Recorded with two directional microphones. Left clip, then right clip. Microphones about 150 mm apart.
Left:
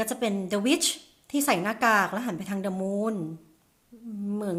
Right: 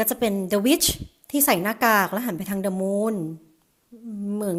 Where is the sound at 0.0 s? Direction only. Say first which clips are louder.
Right 5 dB; 45° right (ahead or behind).